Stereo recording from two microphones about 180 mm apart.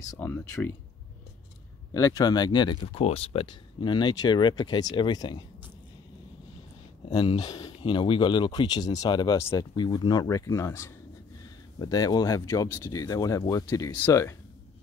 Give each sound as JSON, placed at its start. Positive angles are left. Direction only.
{"t": 0.1, "sound": "speech", "side_deg": 10}
{"t": 2.0, "sound": "speech", "side_deg": 15}
{"t": 7.2, "sound": "speech", "side_deg": 25}